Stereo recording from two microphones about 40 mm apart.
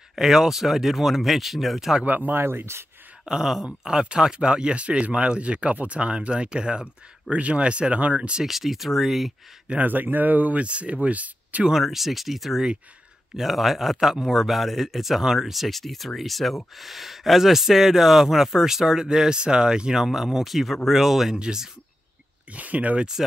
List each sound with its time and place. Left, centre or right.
0.1 s speech: centre
2.0 s speech: right
2.3 s speech: right
3.3 s speech: centre; by 8.4 s right
8.5 s speech: centre
9.8 s speech: right
11.8 s speech: centre
21.4 s speech: centre
22.5 s speech: right